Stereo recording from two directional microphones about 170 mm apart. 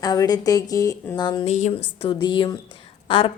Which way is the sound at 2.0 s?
30° left (ahead or behind).